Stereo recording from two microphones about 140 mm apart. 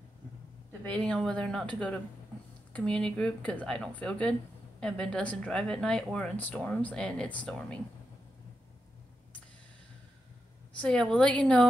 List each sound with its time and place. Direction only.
0.8 s speech: 10° left (ahead or behind)
10.8 s speech: 5° left (ahead or behind)